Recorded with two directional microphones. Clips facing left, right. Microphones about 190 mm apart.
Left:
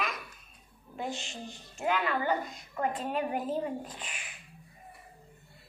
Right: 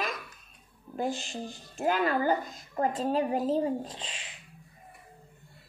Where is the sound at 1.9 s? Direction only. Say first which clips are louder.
Right 3 dB; 40° right (ahead or behind).